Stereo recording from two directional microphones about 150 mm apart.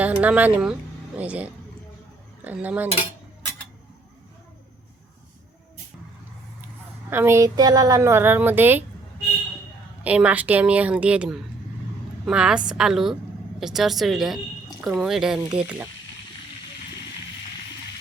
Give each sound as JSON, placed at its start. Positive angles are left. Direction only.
{"t": 0.0, "sound": "a woman's voice", "side_deg": -10}
{"t": 7.1, "sound": "a woman's voice", "side_deg": -15}
{"t": 10.0, "sound": "a woman's voice", "side_deg": -10}